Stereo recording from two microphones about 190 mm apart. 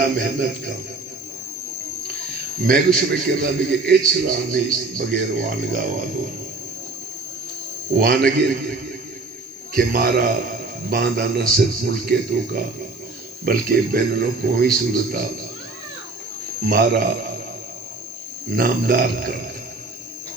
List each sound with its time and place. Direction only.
0.2 s speech: 45° right (ahead or behind)
2.6 s speech: 50° right (ahead or behind)
7.9 s speech: 50° right (ahead or behind)
9.7 s speech: 50° right (ahead or behind)
16.6 s speech: 50° right (ahead or behind)
18.5 s speech: 50° right (ahead or behind)